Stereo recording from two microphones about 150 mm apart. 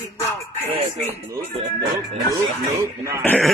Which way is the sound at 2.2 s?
20° right (ahead or behind).